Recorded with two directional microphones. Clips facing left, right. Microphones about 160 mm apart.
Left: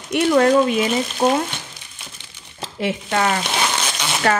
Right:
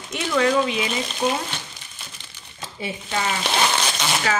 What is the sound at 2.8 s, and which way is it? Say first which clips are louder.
Speech: left 7 dB; 70° left (ahead or behind).